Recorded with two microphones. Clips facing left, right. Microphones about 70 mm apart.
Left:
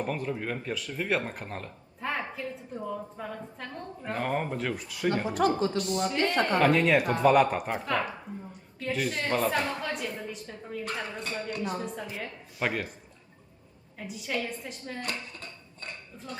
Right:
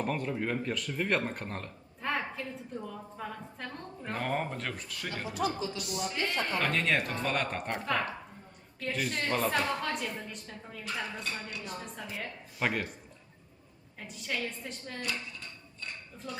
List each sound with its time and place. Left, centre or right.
0.0 s speech: centre
5.1 s a woman's voice: left
6.6 s speech: centre
11.2 s a woman's voice: left
12.1 s speech: centre
14.1 s speech: centre
15.0 s music: left
16.1 s speech: centre